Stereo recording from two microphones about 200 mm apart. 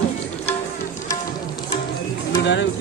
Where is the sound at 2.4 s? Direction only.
60° left (ahead or behind).